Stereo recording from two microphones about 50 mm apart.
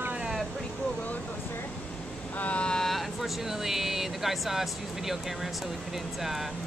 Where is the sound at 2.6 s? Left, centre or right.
Centre.